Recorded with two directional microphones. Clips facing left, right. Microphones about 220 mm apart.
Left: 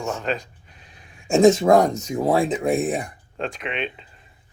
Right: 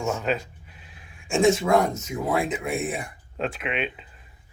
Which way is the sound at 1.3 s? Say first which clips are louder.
Left 5 dB; 40° left (ahead or behind).